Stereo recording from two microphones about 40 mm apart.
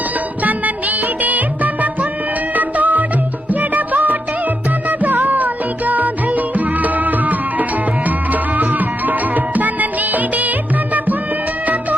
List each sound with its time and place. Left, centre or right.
0.4 s music: right
11.6 s music: right